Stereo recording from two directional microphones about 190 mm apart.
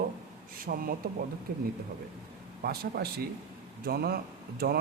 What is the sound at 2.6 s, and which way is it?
Speech, 55° right (ahead or behind).